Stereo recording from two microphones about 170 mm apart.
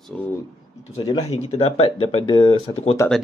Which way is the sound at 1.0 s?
35° left (ahead or behind).